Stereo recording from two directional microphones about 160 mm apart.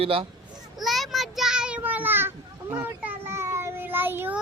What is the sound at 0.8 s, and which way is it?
Child singing, centre (ahead or behind).